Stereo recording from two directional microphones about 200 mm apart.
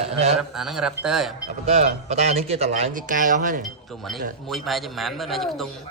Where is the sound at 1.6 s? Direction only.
35° right (ahead or behind).